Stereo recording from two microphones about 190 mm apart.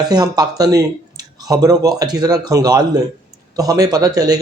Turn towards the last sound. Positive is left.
turn(degrees=-20)  # may be behind; listen again after turning